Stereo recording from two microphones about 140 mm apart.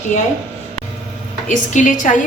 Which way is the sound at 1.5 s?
65° left (ahead or behind).